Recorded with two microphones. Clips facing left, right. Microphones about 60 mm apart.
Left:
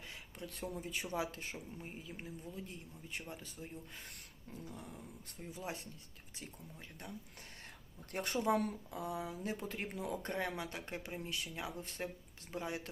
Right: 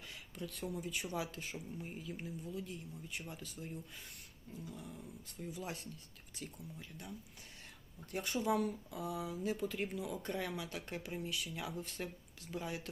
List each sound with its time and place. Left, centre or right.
0.3 s speech: left
4.6 s dog: left
5.4 s speech: left
6.4 s speech: left
8.1 s speech: left